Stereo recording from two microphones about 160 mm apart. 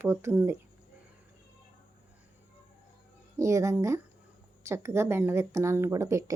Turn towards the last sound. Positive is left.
turn(degrees=-20)  # may be behind; listen again after turning